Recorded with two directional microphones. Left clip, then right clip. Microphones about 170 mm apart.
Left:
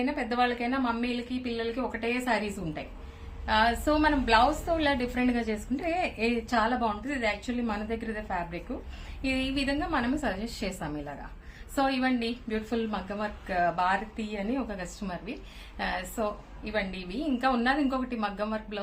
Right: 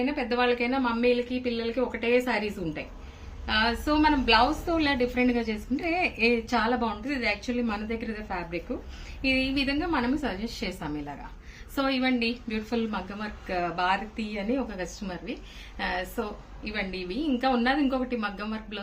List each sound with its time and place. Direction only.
0.0 s a woman's voice: 15° left (ahead or behind)
5.8 s a woman's voice: 15° left (ahead or behind)